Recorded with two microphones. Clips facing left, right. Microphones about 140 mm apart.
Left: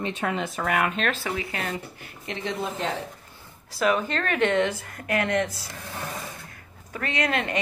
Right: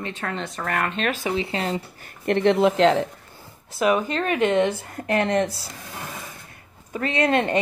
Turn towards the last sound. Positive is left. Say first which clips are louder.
# right 6 dB
turn(degrees=-30)  # may be behind; listen again after turning